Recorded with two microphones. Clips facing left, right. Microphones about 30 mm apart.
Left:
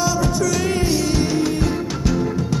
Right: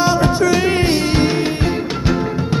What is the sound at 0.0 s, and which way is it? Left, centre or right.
Music, right.